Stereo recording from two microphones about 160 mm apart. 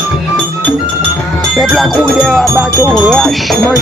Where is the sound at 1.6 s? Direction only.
Centre (ahead or behind).